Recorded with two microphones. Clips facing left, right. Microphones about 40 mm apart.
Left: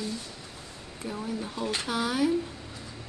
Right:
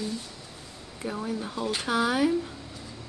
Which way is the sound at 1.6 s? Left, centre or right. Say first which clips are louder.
Even; centre.